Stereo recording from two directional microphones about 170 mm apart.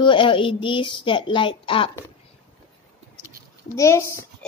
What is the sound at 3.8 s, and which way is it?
Speech, 15° left (ahead or behind).